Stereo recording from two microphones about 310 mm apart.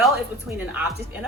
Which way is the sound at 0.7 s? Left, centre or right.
Centre.